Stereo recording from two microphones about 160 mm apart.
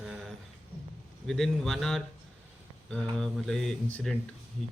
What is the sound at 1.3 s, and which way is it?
Speech, centre (ahead or behind).